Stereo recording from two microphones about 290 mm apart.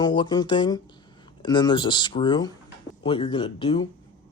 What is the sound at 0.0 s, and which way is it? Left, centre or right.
Speech, centre.